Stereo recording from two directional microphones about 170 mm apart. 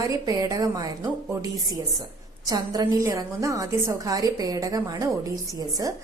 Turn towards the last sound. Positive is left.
turn(degrees=-20)  # may be behind; listen again after turning